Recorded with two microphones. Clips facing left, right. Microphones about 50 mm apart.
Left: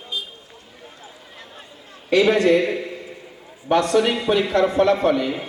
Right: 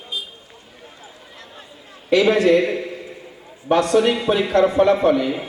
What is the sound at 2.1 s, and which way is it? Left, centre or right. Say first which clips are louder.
A man's voice: right 1 dB; centre.